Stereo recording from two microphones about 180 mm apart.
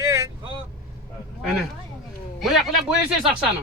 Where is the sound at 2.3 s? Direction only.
Centre (ahead or behind).